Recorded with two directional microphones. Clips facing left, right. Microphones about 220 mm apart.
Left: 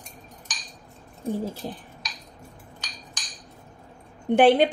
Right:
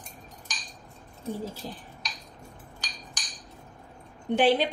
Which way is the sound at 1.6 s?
55° left (ahead or behind).